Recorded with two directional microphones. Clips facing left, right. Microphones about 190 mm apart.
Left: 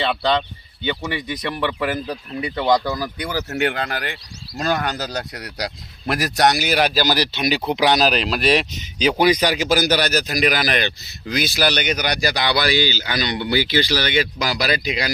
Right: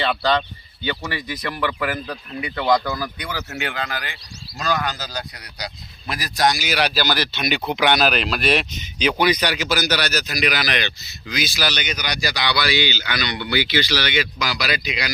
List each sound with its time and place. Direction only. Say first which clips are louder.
0.0 s speech: left 1 dB; 20° left (ahead or behind)
3.2 s speech: left 6 dB; 40° left (ahead or behind)